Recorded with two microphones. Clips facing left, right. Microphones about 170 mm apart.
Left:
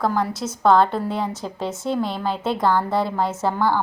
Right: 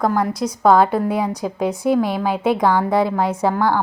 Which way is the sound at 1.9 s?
55° right (ahead or behind).